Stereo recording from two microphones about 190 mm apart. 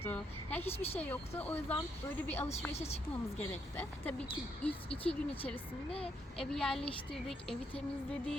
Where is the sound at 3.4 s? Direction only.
10° left (ahead or behind).